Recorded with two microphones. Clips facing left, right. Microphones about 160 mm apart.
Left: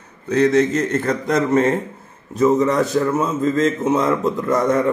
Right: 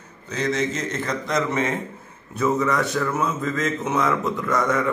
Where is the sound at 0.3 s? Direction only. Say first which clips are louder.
Left 9 dB; 60° left (ahead or behind).